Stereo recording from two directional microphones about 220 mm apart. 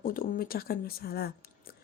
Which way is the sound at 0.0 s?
40° left (ahead or behind).